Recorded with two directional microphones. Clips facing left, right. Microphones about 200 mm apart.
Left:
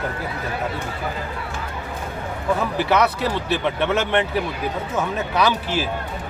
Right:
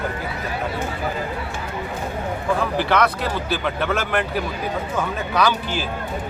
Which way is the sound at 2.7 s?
5° left (ahead or behind).